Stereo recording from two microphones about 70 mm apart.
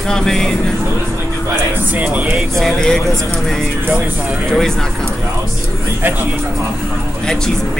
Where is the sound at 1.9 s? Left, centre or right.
Right.